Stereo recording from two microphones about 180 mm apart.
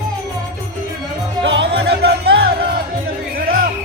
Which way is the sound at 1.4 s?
90° right.